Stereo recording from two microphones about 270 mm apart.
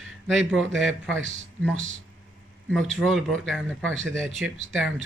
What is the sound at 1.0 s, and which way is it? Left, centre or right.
Speech, right.